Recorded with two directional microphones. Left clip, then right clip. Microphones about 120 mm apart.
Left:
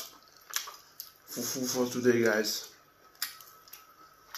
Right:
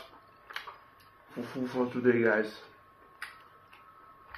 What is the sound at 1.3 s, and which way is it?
Speech, 10° left (ahead or behind).